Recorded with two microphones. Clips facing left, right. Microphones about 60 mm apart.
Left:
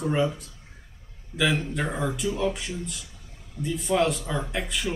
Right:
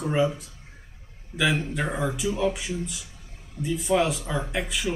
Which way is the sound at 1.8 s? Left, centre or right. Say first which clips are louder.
Right 2 dB; centre.